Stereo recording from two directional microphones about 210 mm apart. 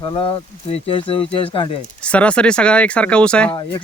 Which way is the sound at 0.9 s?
25° left (ahead or behind).